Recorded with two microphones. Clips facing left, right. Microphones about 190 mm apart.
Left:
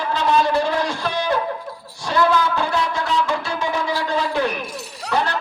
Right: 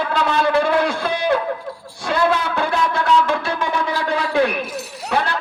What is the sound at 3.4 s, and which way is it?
Wind instrument, 55° right (ahead or behind).